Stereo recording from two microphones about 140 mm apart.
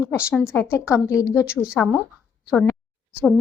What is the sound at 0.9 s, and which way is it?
Speech, 20° left (ahead or behind).